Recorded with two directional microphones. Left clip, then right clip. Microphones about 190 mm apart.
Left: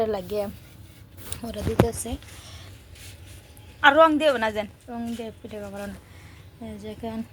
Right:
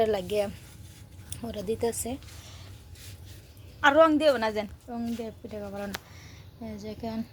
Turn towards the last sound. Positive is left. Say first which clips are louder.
# left 2 dB
turn(degrees=0)  # may be behind; listen again after turning